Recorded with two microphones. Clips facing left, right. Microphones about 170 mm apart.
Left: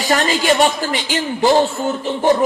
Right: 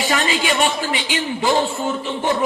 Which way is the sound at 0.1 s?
40° left (ahead or behind).